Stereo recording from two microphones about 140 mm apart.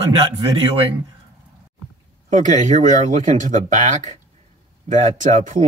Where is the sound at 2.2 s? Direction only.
60° right (ahead or behind).